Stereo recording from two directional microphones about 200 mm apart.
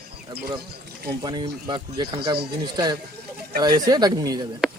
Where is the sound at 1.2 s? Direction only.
20° right (ahead or behind).